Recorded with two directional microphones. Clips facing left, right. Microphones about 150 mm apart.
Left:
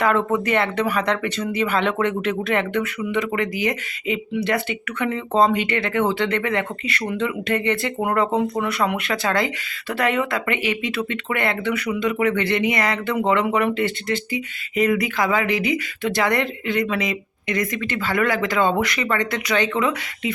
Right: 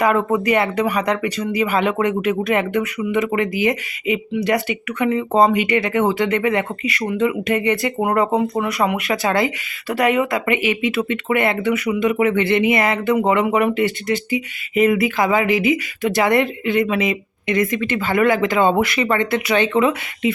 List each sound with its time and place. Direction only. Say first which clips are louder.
0.0 s speech: right 3 dB; 10° right (ahead or behind)
9.0 s speech: right 3 dB; 20° right (ahead or behind)